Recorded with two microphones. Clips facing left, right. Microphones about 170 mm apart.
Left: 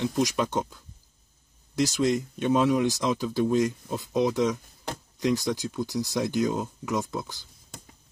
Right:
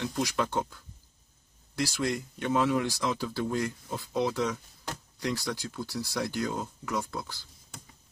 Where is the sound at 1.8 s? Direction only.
20° left (ahead or behind).